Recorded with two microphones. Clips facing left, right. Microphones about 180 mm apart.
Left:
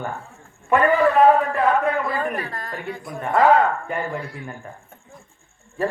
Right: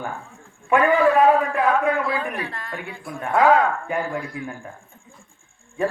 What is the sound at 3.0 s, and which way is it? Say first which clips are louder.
Speech: even; centre (ahead or behind).